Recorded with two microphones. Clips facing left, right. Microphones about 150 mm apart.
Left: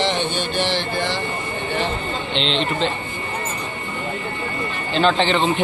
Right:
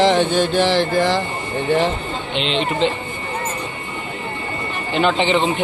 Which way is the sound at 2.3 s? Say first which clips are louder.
Right 2 dB; 5° right (ahead or behind).